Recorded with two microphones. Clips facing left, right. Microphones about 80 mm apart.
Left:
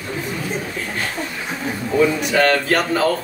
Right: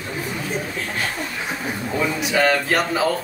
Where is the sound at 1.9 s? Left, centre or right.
Centre.